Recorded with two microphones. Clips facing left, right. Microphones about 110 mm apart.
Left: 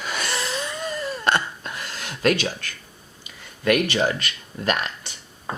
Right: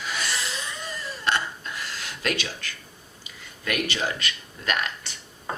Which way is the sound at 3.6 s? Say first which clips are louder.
Left 8 dB; 55° left (ahead or behind).